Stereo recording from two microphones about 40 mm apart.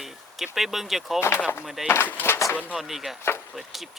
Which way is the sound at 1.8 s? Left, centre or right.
Left.